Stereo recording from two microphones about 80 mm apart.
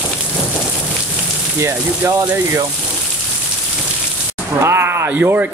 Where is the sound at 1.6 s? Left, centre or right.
Right.